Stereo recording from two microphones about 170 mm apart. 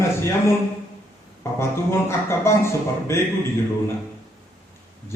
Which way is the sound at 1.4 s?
15° left (ahead or behind).